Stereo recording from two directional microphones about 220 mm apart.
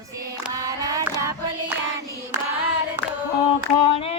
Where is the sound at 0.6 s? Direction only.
15° right (ahead or behind).